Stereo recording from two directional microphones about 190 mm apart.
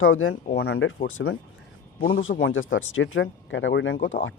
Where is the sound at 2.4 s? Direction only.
90° left.